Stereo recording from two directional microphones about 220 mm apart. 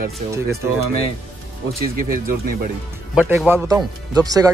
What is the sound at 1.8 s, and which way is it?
Speech, 40° right (ahead or behind).